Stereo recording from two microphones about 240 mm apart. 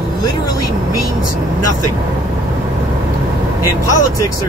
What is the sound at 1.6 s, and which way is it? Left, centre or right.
Speech, left.